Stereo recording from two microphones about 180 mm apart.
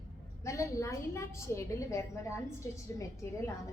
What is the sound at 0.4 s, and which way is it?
A woman's voice, 15° left (ahead or behind).